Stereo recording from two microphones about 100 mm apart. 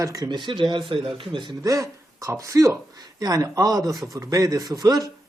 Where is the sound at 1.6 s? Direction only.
35° right (ahead or behind).